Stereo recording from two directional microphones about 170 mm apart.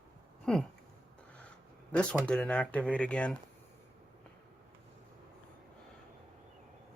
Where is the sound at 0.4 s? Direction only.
Centre (ahead or behind).